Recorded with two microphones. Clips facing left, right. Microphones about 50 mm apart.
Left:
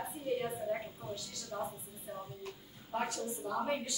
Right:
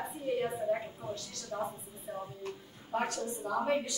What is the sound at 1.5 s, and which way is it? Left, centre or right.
Speech, centre.